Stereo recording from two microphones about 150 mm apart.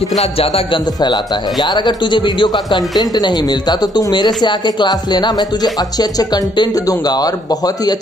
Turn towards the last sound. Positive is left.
turn(degrees=25)  # may be behind; listen again after turning